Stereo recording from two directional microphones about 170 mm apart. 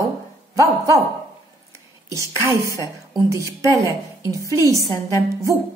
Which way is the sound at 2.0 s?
20° right (ahead or behind).